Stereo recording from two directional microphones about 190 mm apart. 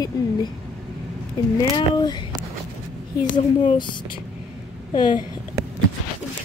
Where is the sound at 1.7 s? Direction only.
20° left (ahead or behind).